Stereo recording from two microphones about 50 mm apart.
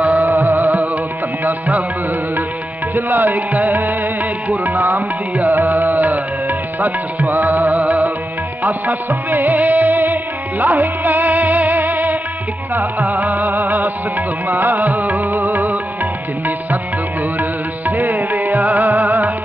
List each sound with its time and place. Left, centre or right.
0.0 s music: right
0.3 s music: right
2.9 s music: right
17.4 s music: right